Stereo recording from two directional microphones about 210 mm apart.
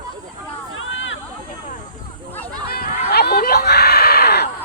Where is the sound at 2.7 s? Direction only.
45° left (ahead or behind).